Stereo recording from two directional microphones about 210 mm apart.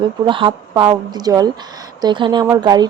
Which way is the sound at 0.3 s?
25° right (ahead or behind).